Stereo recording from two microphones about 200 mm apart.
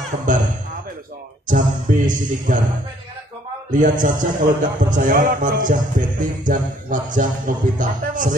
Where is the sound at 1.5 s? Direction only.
40° right (ahead or behind).